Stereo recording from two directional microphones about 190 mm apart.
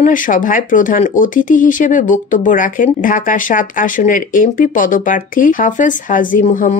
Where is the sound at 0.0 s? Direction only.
45° left (ahead or behind).